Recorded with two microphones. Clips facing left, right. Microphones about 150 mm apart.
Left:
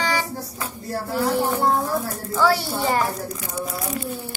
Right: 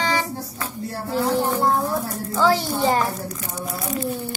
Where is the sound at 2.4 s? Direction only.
15° right (ahead or behind).